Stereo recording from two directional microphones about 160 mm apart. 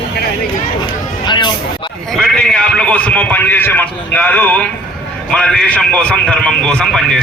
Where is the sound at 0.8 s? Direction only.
30° left (ahead or behind).